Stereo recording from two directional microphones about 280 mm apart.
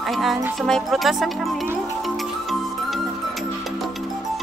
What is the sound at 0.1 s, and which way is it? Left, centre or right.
Speech, centre.